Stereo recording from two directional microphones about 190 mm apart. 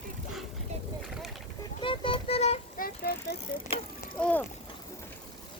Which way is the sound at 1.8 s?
25° left (ahead or behind).